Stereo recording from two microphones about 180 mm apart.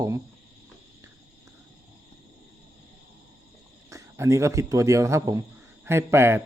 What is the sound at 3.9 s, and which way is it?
Speech, 15° right (ahead or behind).